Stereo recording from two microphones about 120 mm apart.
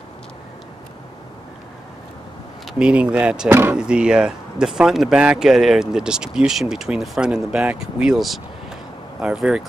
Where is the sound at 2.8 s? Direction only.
10° right (ahead or behind).